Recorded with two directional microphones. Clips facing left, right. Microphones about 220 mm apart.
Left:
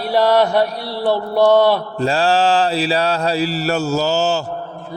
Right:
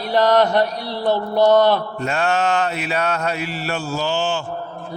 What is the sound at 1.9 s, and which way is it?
Mantra, 30° left (ahead or behind).